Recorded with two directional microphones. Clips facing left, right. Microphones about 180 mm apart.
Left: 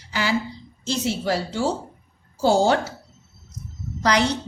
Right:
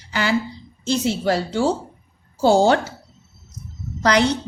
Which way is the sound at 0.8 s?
60° right (ahead or behind).